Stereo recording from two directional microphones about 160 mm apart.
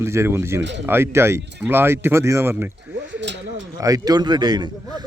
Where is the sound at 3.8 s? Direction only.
25° right (ahead or behind).